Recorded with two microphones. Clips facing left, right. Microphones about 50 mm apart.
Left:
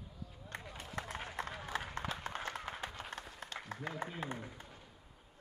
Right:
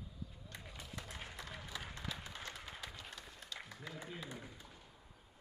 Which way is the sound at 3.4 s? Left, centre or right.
Left.